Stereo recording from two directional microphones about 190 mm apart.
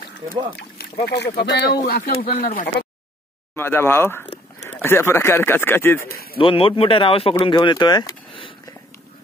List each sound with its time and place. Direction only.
1.0 s speech: 60° left (ahead or behind); by 2.7 s 45° left (ahead or behind)
3.5 s speech: 10° left (ahead or behind)
6.3 s speech: 30° left (ahead or behind)